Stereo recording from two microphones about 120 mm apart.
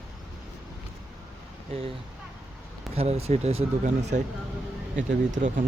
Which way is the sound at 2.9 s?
60° right (ahead or behind).